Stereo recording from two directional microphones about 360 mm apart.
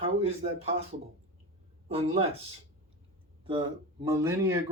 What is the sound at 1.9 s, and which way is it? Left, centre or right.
Speech, centre.